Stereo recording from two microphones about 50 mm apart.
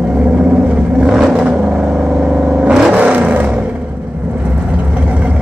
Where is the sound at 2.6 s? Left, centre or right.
Centre.